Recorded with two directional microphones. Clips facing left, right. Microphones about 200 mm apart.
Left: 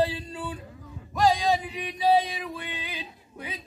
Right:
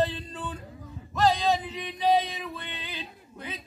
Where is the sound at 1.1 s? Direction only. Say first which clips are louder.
Left 1 dB; 10° left (ahead or behind).